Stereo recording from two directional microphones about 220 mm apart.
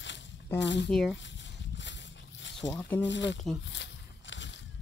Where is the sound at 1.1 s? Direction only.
55° left (ahead or behind).